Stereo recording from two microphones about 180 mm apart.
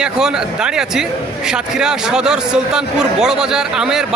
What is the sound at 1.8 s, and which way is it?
A man's voice, 5° right (ahead or behind).